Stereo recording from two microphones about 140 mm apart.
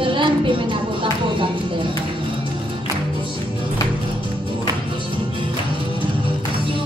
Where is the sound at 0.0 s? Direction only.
35° right (ahead or behind).